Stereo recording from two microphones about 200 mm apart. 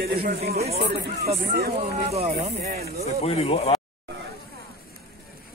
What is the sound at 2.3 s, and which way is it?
Speech, 45° right (ahead or behind).